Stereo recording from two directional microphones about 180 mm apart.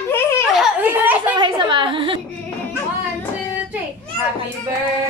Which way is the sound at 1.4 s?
25° right (ahead or behind).